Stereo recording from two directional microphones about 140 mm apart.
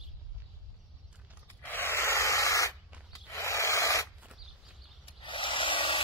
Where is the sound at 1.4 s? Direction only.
15° left (ahead or behind).